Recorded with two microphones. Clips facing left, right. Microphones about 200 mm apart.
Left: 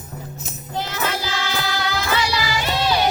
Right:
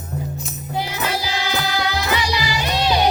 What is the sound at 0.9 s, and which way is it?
Music, 15° right (ahead or behind).